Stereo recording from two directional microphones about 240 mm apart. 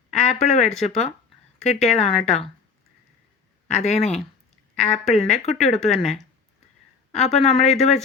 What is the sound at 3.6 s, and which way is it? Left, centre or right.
A woman's voice, left.